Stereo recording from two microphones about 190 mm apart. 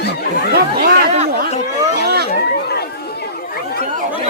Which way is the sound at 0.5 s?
55° right (ahead or behind).